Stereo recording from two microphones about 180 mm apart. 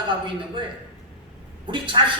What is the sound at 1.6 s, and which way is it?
Speech, 25° right (ahead or behind).